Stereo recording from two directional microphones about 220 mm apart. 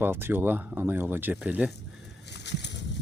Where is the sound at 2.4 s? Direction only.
50° left (ahead or behind).